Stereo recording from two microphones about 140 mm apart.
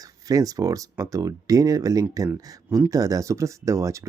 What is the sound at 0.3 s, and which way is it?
Speech, 25° right (ahead or behind).